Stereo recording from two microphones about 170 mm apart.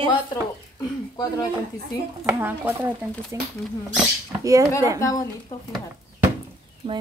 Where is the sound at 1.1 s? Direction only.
25° left (ahead or behind).